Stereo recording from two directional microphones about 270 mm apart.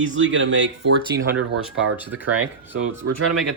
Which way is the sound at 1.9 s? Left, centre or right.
Centre.